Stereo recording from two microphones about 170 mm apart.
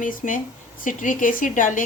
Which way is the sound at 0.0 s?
50° left (ahead or behind).